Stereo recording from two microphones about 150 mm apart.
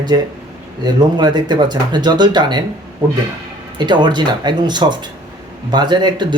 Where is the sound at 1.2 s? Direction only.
30° right (ahead or behind).